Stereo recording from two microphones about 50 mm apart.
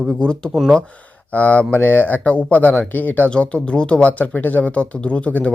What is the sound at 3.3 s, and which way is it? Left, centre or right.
Speech, centre.